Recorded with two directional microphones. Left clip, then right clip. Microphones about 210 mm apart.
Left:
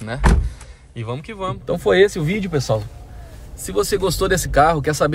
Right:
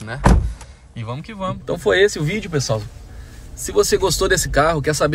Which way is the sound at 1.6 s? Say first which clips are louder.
Left 1 dB; 15° left (ahead or behind).